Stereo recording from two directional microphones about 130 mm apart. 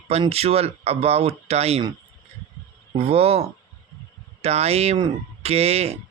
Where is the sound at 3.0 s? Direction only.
50° right (ahead or behind).